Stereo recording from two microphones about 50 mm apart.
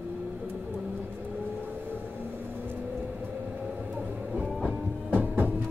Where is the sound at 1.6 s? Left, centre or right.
Right.